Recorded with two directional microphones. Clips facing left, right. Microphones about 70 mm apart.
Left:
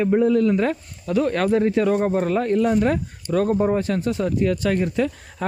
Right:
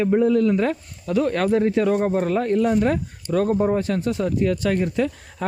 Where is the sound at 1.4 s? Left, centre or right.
Left.